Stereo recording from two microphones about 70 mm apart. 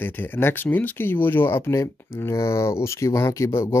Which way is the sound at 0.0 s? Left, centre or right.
Left.